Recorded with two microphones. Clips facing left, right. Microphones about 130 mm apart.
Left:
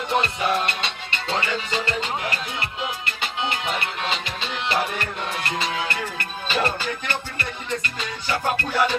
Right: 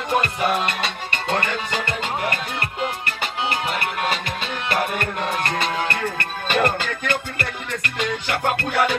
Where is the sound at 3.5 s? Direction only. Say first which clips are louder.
Right 2 dB; 50° right (ahead or behind).